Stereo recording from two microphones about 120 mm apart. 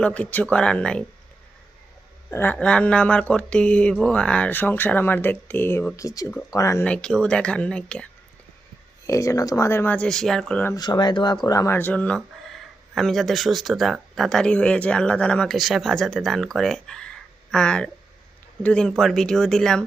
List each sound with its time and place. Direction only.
0.0 s speech: 10° left (ahead or behind)
2.3 s speech: 15° left (ahead or behind)
6.8 s speech: 10° left (ahead or behind)
9.0 s speech: 25° left (ahead or behind); by 10.6 s 5° left (ahead or behind)
10.8 s speech: 35° left (ahead or behind)
11.8 s speech: 10° left (ahead or behind)